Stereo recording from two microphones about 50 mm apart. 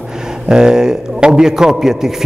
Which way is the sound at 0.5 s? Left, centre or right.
Centre.